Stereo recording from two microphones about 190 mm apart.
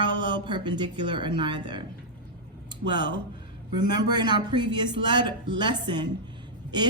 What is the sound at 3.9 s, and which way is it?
A woman's voice, 20° right (ahead or behind).